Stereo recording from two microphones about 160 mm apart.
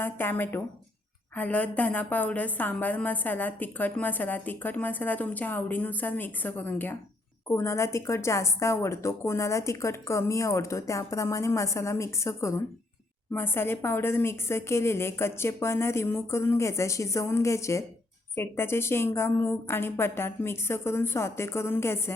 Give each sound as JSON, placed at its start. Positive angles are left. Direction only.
{"t": 0.0, "sound": "a woman's voice", "side_deg": 15}